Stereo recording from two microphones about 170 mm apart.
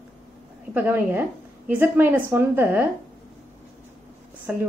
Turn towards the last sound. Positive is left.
turn(degrees=-5)  # may be behind; listen again after turning